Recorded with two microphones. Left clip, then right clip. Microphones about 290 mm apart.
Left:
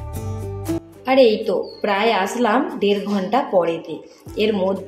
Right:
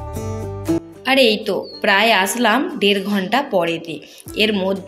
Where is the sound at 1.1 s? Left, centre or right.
Right.